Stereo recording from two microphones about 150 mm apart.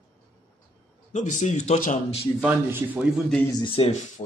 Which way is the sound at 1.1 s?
55° left (ahead or behind).